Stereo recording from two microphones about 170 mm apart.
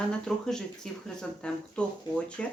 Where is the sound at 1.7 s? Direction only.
5° left (ahead or behind).